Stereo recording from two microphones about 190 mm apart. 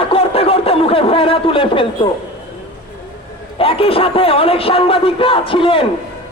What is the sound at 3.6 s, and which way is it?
A man's voice, 30° left (ahead or behind).